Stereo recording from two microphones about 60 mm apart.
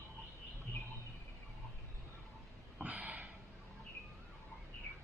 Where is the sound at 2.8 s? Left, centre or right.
Centre.